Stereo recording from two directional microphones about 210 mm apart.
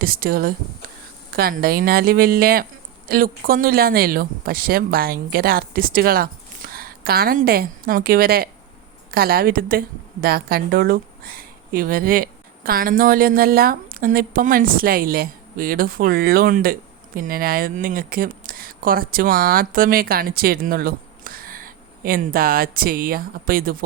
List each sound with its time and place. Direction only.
0.0 s a woman's voice: 45° right (ahead or behind)